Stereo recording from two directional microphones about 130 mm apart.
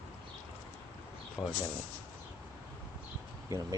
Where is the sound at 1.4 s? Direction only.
20° left (ahead or behind).